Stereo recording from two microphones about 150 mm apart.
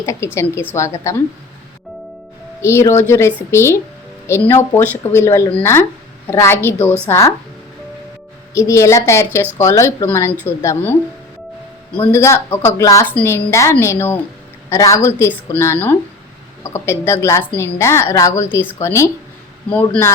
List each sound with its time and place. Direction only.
0.0 s a woman's voice: 20° left (ahead or behind)
2.6 s a woman's voice: 20° left (ahead or behind)
8.5 s a woman's voice: 20° left (ahead or behind)
12.1 s a woman's voice: 15° left (ahead or behind)